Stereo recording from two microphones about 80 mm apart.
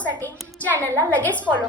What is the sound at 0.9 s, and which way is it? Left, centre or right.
Speech, left.